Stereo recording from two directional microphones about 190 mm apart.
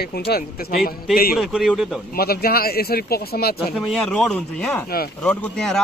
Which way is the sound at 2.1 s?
55° left (ahead or behind).